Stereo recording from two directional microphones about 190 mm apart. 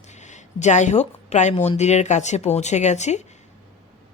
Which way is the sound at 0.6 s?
40° left (ahead or behind).